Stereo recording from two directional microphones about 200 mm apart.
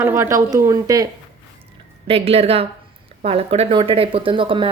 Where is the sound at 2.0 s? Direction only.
30° right (ahead or behind).